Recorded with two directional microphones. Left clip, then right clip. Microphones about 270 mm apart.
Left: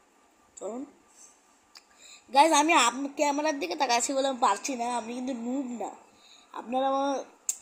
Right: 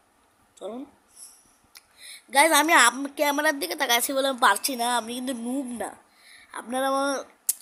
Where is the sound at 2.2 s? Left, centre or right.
Right.